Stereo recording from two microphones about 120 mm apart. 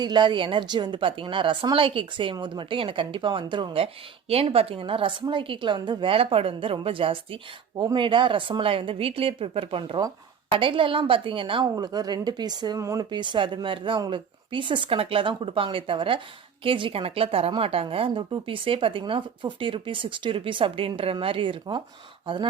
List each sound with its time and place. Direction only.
0.0 s speech: 40° right (ahead or behind)
11.8 s speech: 35° right (ahead or behind)
13.1 s speech: 40° right (ahead or behind)